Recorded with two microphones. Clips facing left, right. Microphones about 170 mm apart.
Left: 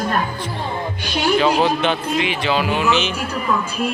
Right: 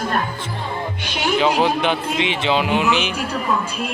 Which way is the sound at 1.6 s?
15° right (ahead or behind).